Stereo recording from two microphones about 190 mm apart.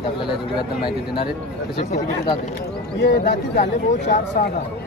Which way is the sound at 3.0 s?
55° left (ahead or behind).